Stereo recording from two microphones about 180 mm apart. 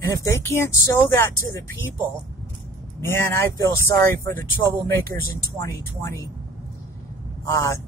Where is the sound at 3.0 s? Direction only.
15° left (ahead or behind).